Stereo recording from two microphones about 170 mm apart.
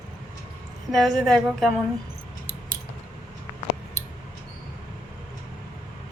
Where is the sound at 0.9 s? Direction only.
Centre (ahead or behind).